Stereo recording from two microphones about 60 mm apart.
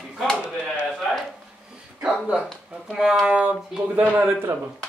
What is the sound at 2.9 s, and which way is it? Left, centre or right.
Speech, centre.